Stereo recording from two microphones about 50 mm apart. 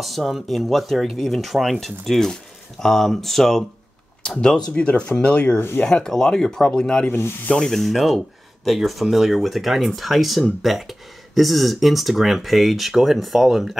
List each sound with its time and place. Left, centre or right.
0.0 s speech: centre
0.9 s speech: centre
1.2 s speech: centre
4.4 s speech: centre
7.1 s speech: left
7.5 s speech: centre